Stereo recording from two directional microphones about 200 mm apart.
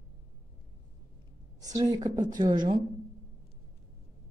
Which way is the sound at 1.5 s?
20° right (ahead or behind).